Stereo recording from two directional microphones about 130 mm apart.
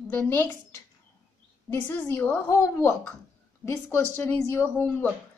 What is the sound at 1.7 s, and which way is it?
A woman's voice, 15° left (ahead or behind).